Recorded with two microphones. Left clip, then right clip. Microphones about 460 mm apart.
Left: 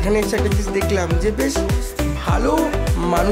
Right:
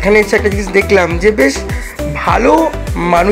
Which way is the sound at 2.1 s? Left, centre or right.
Left.